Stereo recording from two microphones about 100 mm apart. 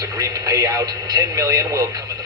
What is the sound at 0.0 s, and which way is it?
Speech, 40° right (ahead or behind).